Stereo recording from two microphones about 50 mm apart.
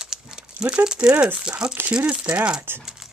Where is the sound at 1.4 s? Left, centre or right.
Centre.